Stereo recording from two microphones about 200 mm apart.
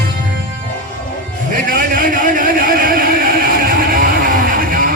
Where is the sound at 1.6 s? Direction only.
45° right (ahead or behind).